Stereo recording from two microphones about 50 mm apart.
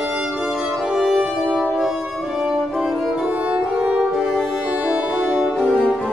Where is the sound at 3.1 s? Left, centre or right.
Right.